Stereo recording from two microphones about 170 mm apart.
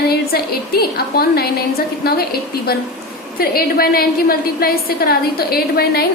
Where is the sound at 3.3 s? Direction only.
60° left (ahead or behind).